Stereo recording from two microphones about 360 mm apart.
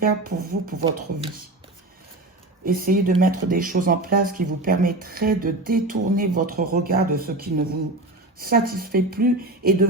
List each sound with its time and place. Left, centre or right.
0.0 s speech: right
2.6 s speech: right